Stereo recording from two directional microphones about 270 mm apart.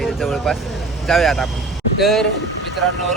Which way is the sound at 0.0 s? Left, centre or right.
Centre.